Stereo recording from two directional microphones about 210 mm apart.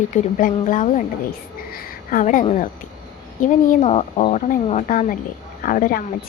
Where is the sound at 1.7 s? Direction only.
40° left (ahead or behind).